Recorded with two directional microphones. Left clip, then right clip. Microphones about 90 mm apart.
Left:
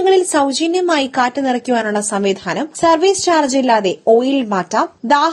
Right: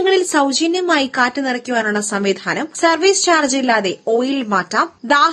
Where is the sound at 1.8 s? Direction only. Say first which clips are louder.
Left 1 dB; 30° left (ahead or behind).